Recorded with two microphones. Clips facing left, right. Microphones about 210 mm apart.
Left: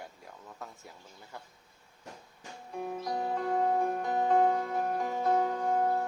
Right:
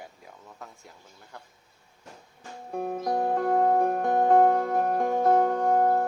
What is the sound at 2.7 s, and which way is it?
Music, 50° right (ahead or behind).